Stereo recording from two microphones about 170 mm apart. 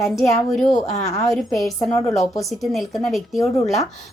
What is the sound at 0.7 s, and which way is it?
Speech, 40° left (ahead or behind).